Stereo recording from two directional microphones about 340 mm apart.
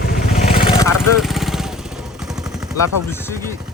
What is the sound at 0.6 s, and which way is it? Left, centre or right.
Vehicle, centre.